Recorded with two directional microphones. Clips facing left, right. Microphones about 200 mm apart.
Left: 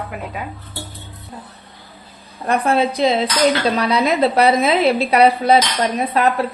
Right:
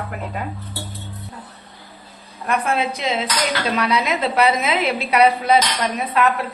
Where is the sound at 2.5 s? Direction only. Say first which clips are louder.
Left 4 dB; 35° left (ahead or behind).